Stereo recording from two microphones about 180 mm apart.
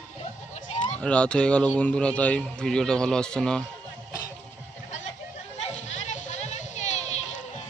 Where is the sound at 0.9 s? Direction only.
5° left (ahead or behind).